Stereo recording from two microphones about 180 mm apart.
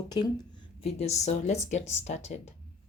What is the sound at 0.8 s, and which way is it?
Speech, 35° left (ahead or behind).